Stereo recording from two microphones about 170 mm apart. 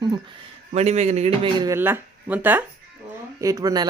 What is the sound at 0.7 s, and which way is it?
Speech, 40° right (ahead or behind).